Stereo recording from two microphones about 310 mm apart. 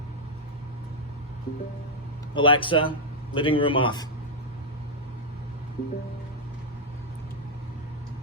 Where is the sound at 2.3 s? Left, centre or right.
Centre.